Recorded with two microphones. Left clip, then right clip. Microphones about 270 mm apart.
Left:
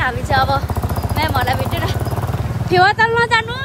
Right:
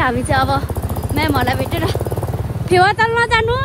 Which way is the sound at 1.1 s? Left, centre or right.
Right.